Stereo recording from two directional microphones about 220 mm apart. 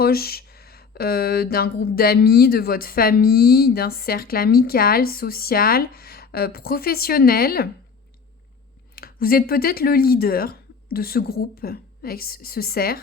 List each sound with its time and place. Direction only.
0.0 s speech: 45° left (ahead or behind)
9.0 s speech: 40° left (ahead or behind)